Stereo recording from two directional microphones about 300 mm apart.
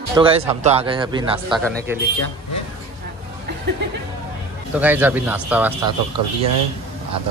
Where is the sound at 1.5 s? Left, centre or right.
Centre.